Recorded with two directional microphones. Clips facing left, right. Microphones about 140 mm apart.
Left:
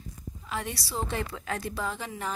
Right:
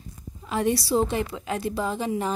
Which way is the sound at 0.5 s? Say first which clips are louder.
Right 11 dB; 25° right (ahead or behind).